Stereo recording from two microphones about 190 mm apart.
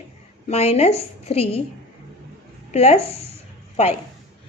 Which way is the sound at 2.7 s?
35° left (ahead or behind).